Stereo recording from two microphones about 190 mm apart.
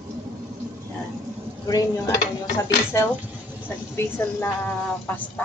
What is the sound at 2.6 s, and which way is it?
A woman's voice, 15° left (ahead or behind).